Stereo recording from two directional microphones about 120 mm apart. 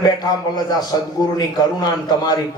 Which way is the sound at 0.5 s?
35° left (ahead or behind).